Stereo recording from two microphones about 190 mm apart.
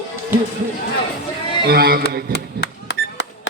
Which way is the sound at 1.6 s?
55° right (ahead or behind).